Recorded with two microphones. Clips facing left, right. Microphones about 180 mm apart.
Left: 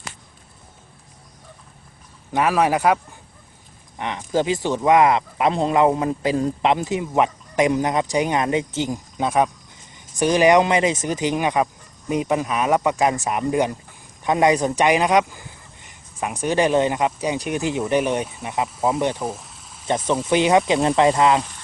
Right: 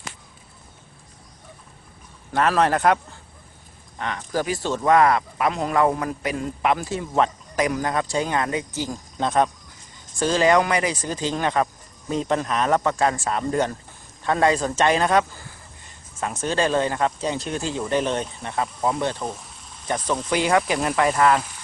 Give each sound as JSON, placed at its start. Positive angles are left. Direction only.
{"t": 2.3, "sound": "speech", "side_deg": 10}
{"t": 9.1, "sound": "speech", "side_deg": 10}
{"t": 20.3, "sound": "speech", "side_deg": 20}